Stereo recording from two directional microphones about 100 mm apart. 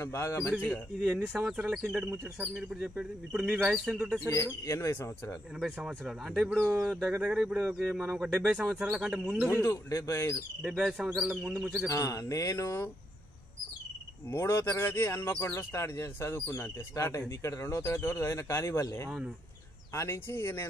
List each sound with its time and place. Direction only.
0.0 s speech: 25° left (ahead or behind)
1.0 s speech: 15° right (ahead or behind)
4.3 s speech: 30° left (ahead or behind)
5.6 s speech: 5° right (ahead or behind)
9.5 s speech: 25° left (ahead or behind)
10.8 s speech: 5° right (ahead or behind)
11.9 s speech: 30° left (ahead or behind)
14.3 s speech: 25° left (ahead or behind)
19.0 s speech: 10° right (ahead or behind)
19.9 s speech: 25° left (ahead or behind)